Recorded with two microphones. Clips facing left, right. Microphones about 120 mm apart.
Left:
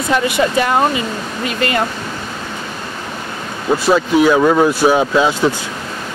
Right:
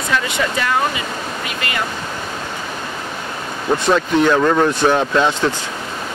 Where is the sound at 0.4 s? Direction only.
30° left (ahead or behind).